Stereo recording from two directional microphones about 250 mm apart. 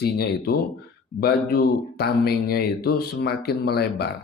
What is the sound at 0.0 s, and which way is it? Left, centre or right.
Speech, left.